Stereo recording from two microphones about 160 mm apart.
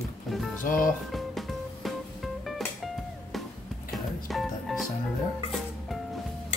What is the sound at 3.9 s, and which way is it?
Music, centre (ahead or behind).